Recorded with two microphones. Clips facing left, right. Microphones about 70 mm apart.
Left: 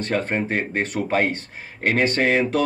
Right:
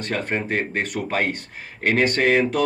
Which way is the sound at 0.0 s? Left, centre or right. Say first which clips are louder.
Left 2 dB; left.